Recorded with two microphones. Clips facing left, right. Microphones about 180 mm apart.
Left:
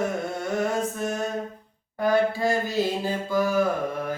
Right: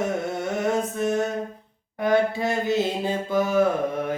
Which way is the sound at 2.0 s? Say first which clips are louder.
Right 1 dB; 20° right (ahead or behind).